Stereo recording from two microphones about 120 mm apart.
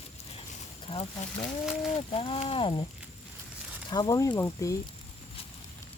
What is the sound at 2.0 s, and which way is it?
Speech, 50° left (ahead or behind).